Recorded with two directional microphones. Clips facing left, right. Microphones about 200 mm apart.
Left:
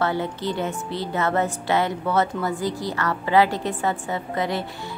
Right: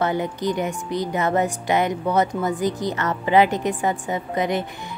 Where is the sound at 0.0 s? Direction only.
15° right (ahead or behind).